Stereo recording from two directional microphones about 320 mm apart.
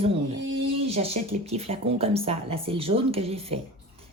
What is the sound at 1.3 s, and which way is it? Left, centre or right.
A woman's voice, centre.